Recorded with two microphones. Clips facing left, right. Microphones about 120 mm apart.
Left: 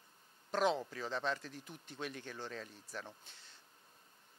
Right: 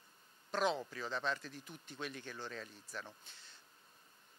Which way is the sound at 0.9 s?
35° left (ahead or behind).